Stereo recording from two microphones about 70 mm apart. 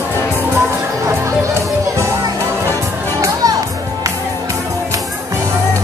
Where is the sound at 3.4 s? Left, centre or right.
Right.